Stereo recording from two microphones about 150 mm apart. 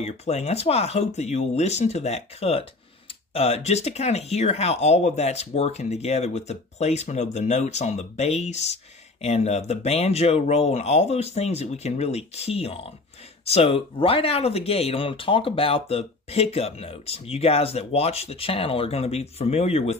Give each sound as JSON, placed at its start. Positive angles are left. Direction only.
{"t": 0.0, "sound": "speech", "side_deg": 45}